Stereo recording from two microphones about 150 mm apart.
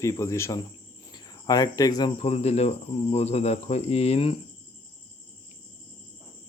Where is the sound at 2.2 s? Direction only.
45° left (ahead or behind).